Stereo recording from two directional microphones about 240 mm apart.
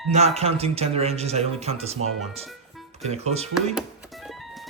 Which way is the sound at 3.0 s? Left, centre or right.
Right.